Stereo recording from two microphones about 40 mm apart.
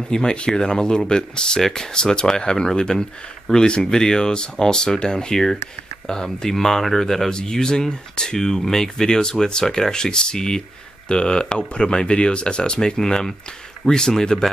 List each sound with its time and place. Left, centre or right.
0.1 s speech: centre